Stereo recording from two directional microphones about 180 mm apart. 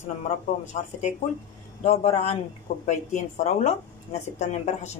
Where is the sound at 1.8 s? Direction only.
35° left (ahead or behind).